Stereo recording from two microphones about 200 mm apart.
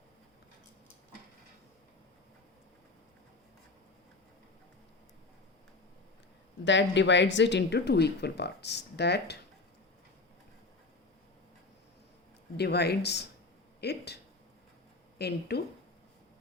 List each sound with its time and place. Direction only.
6.7 s speech: 65° left (ahead or behind)
12.5 s speech: 55° left (ahead or behind)
15.2 s speech: 55° left (ahead or behind)